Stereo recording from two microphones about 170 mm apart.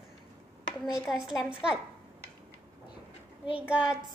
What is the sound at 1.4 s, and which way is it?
Speech, 5° right (ahead or behind).